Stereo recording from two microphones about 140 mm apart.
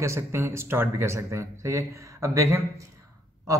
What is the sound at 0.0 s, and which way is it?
Speech, 20° right (ahead or behind).